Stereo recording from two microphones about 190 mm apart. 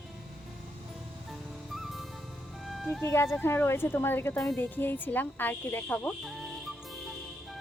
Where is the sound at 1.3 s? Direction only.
Centre (ahead or behind).